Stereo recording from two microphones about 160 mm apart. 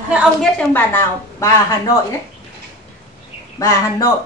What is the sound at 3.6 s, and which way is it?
Speech, 20° left (ahead or behind).